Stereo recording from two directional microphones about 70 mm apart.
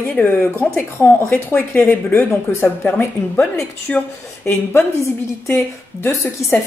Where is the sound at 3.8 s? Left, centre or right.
Left.